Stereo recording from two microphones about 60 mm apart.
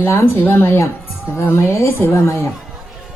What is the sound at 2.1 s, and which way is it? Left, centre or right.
Speech, left.